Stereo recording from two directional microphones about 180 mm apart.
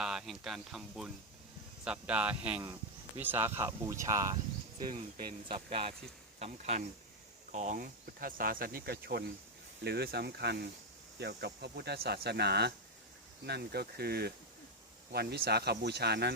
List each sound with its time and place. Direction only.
0.0 s speech: 5° right (ahead or behind)
5.5 s speech: 30° right (ahead or behind); by 16.3 s 65° right (ahead or behind)